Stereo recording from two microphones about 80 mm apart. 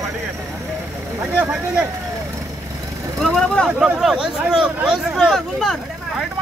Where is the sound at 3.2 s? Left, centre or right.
Centre.